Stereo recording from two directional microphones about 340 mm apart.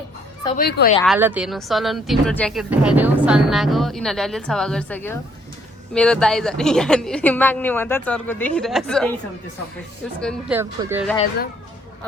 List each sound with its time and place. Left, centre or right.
0.4 s speech: left
1.0 s speech: centre
10.2 s speech: centre